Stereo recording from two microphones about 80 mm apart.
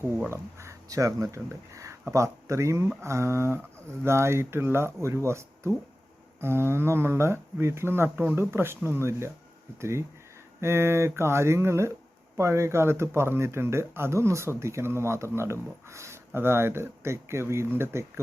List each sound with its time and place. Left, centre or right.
0.3 s speech: right
10.6 s speech: right